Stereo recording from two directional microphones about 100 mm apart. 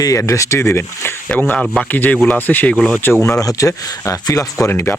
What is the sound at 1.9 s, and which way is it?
Speech, 20° left (ahead or behind).